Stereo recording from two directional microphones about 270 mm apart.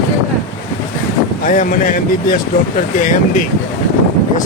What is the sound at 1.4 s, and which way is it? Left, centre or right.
Speech, left.